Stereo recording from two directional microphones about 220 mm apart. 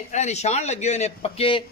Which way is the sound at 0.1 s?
30° left (ahead or behind).